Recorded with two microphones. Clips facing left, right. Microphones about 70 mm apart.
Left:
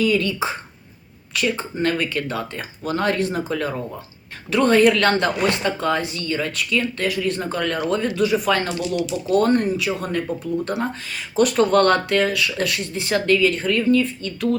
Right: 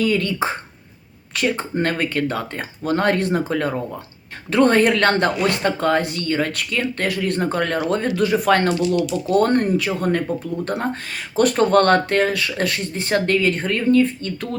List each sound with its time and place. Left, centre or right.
0.0 s speech: right
11.3 s speech: right